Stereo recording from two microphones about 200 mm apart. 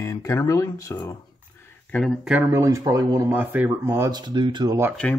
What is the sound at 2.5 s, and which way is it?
Speech, 15° right (ahead or behind).